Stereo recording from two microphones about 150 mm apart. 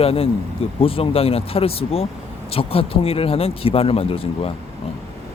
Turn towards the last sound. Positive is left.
turn(degrees=40)  # may be behind; listen again after turning